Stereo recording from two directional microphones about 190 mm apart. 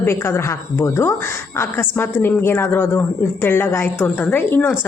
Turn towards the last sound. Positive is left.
turn(degrees=10)  # may be behind; listen again after turning